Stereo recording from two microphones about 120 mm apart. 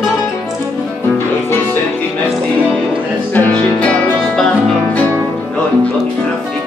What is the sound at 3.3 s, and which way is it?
Music, 15° left (ahead or behind).